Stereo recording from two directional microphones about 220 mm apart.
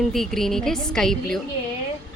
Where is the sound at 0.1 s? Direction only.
Centre (ahead or behind).